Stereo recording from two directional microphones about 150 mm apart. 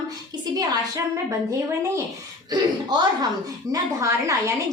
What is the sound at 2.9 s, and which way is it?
A woman's voice, 30° right (ahead or behind).